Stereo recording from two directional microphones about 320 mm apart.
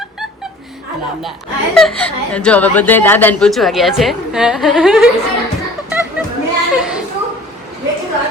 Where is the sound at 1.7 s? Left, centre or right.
Centre.